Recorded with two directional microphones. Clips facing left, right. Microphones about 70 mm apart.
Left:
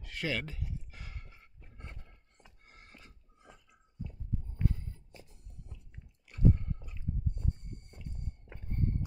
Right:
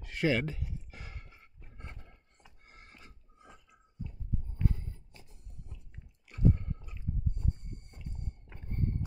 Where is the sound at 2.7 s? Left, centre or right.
Right.